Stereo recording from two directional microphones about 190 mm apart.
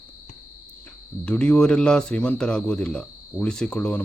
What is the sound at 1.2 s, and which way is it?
Speech, 5° left (ahead or behind).